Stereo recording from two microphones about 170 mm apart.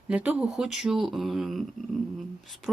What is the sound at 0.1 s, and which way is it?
Speech, 10° right (ahead or behind).